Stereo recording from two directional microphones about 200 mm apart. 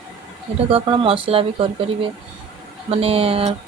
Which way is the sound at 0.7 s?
25° right (ahead or behind).